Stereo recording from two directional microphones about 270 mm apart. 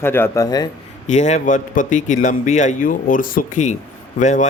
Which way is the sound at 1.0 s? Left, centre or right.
Left.